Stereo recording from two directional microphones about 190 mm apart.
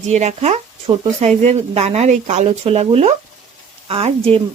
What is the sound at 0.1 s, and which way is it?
Speech, 35° right (ahead or behind).